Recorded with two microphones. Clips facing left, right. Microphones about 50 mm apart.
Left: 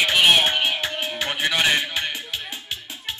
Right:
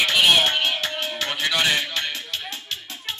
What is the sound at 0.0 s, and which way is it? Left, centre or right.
Music, centre.